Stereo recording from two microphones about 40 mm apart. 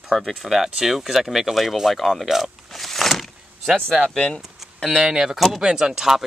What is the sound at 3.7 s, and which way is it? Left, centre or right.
Speech, right.